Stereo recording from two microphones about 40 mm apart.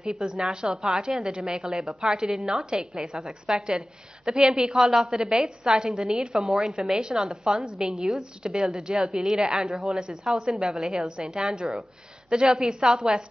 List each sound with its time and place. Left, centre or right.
0.0 s a woman's voice: right
2.3 s a woman's voice: centre
2.8 s a woman's voice: centre
5.4 s a woman's voice: centre
5.8 s a woman's voice: right
7.7 s a woman's voice: centre
8.9 s a woman's voice: centre